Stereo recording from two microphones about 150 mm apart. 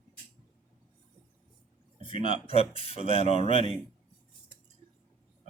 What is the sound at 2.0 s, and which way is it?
Speech, 35° left (ahead or behind).